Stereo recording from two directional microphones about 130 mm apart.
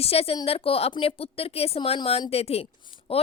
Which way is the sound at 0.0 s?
50° left (ahead or behind).